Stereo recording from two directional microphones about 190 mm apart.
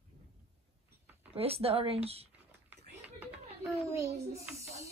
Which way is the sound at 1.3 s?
30° right (ahead or behind).